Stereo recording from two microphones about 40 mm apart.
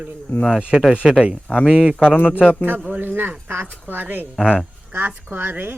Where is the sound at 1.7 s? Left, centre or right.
Right.